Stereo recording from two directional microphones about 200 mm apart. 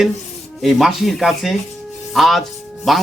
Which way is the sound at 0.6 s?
Centre (ahead or behind).